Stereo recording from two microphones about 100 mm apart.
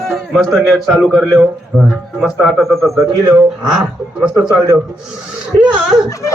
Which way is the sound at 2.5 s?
Centre (ahead or behind).